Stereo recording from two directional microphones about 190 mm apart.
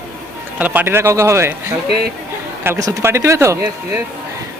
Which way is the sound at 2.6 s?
15° right (ahead or behind).